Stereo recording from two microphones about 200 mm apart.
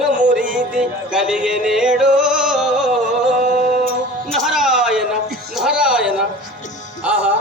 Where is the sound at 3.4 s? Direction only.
40° right (ahead or behind).